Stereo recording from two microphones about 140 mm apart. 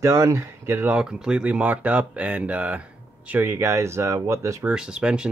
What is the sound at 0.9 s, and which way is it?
Speech, 5° right (ahead or behind).